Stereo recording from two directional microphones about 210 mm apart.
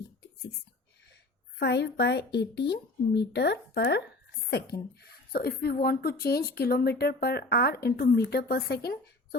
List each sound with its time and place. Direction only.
1.5 s a woman's voice: 50° left (ahead or behind)